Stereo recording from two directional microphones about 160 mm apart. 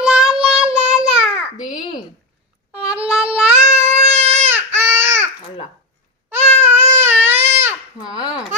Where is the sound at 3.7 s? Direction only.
40° right (ahead or behind).